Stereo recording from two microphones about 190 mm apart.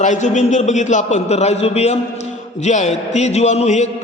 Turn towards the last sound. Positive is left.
turn(degrees=35)  # may be behind; listen again after turning